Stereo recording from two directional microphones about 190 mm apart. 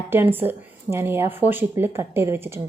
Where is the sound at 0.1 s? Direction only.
10° right (ahead or behind).